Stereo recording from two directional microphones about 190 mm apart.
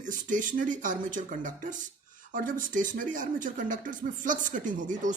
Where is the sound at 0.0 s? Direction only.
40° right (ahead or behind).